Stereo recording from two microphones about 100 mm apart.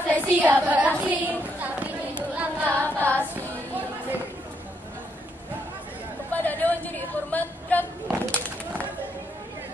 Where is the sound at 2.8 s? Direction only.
15° left (ahead or behind).